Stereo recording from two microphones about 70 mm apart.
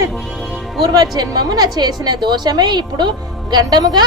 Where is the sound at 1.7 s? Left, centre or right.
Right.